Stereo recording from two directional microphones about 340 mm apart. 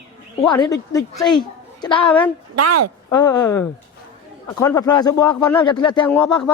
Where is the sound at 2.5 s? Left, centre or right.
Right.